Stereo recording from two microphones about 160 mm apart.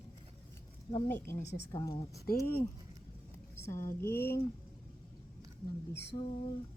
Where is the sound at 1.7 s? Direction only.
25° left (ahead or behind).